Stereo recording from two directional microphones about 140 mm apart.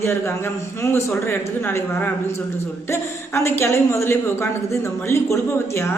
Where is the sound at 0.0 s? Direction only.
20° left (ahead or behind).